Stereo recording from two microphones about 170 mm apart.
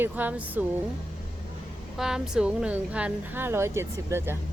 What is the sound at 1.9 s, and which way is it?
A woman's voice, 5° right (ahead or behind).